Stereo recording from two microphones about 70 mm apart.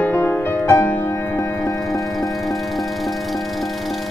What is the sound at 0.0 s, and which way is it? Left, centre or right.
Music, left.